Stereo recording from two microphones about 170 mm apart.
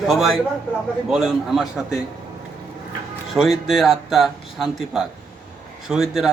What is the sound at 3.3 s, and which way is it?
Speech, centre (ahead or behind).